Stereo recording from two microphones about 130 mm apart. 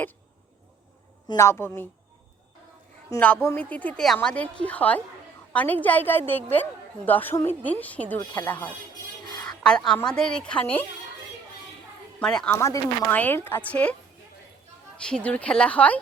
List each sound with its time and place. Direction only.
1.4 s a woman's voice: 20° left (ahead or behind)
3.4 s a woman's voice: 15° left (ahead or behind)
8.2 s speech: 35° left (ahead or behind)
8.4 s a woman's voice: 15° left (ahead or behind)
9.3 s a sound: 35° left (ahead or behind)
9.6 s a woman's voice: 5° left (ahead or behind)
12.2 s a woman's voice: 5° left (ahead or behind)
12.5 s a woman's voice: 20° left (ahead or behind)
15.0 s a woman's voice: 10° left (ahead or behind)